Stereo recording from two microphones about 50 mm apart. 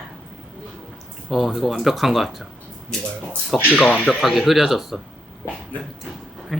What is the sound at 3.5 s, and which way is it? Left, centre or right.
Speech, centre.